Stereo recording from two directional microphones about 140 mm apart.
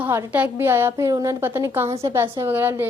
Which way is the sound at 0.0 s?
15° right (ahead or behind).